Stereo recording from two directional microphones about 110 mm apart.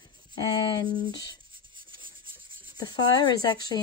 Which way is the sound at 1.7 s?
50° right (ahead or behind).